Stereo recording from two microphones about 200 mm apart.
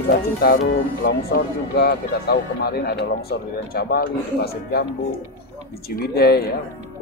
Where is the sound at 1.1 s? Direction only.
55° left (ahead or behind).